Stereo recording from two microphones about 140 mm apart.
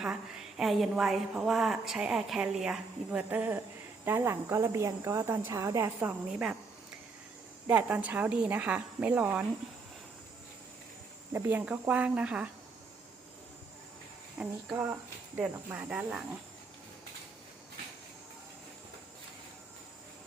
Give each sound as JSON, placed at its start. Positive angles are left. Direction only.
{"t": 0.0, "sound": "a woman's voice", "side_deg": -5}
{"t": 7.7, "sound": "a woman's voice", "side_deg": -10}
{"t": 11.3, "sound": "a woman's voice", "side_deg": -15}
{"t": 14.3, "sound": "a woman's voice", "side_deg": -10}